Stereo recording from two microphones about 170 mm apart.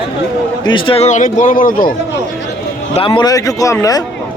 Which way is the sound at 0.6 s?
30° left (ahead or behind).